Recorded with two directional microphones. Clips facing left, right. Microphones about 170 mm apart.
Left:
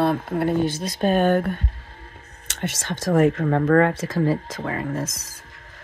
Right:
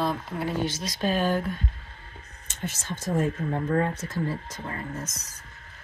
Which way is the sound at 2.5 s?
85° left.